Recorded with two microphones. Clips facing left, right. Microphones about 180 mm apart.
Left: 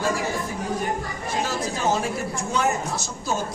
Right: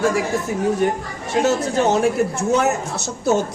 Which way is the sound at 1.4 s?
70° right (ahead or behind).